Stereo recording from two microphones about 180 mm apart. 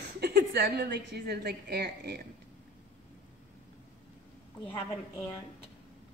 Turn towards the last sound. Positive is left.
turn(degrees=15)  # may be behind; listen again after turning